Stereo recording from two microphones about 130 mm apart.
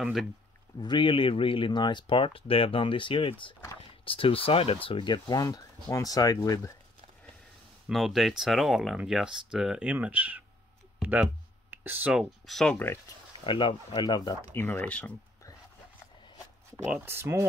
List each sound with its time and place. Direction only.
0.0 s speech: centre (ahead or behind)
0.7 s speech: 35° left (ahead or behind)
7.9 s speech: centre (ahead or behind)
11.0 s a sound: 10° right (ahead or behind)
11.7 s speech: 15° right (ahead or behind); by 12.7 s centre (ahead or behind)
12.7 s speech: 15° left (ahead or behind)
13.4 s speech: 40° left (ahead or behind)
14.5 s speech: 15° left (ahead or behind)
17.0 s speech: 20° right (ahead or behind)